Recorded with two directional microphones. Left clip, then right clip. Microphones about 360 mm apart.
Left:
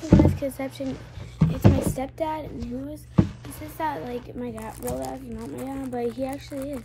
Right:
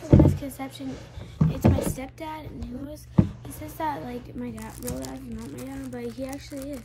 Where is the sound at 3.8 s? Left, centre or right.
Centre.